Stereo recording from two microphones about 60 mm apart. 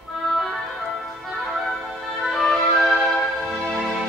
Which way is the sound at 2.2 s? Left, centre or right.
Centre.